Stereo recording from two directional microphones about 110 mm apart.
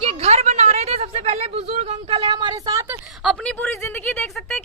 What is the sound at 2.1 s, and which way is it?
Speech, 45° right (ahead or behind).